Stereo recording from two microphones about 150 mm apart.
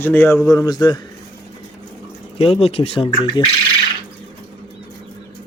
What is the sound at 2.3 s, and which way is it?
Speech, 40° left (ahead or behind).